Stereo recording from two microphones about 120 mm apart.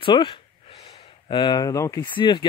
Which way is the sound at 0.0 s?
45° left (ahead or behind).